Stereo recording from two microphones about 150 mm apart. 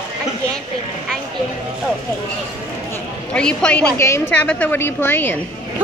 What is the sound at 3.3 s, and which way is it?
A woman's voice, 5° left (ahead or behind).